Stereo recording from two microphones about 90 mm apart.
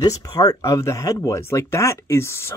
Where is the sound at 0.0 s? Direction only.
40° left (ahead or behind).